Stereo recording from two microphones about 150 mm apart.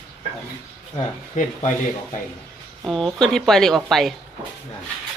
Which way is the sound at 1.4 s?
50° left (ahead or behind).